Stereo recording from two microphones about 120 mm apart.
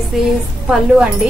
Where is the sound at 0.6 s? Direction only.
10° right (ahead or behind).